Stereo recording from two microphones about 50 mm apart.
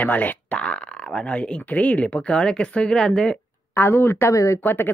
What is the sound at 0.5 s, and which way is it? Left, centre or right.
Speech, left.